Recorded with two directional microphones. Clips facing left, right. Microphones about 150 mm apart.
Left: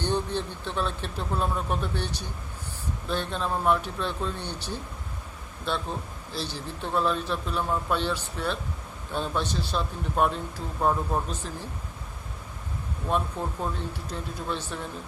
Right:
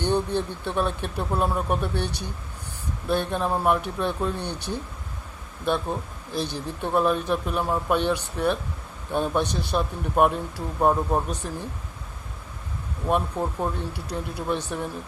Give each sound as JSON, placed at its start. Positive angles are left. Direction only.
{"t": 0.0, "sound": "speech", "side_deg": -10}
{"t": 6.3, "sound": "speech", "side_deg": -15}
{"t": 13.1, "sound": "speech", "side_deg": -15}